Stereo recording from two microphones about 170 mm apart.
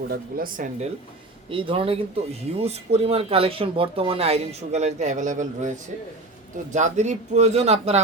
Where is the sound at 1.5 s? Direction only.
30° right (ahead or behind); by 5.7 s 45° right (ahead or behind).